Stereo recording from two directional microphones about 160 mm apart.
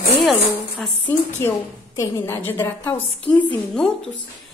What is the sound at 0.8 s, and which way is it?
A woman's voice, 10° left (ahead or behind).